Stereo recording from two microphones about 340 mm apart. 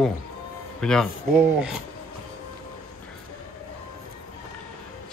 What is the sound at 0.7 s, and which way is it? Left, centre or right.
Speech, centre.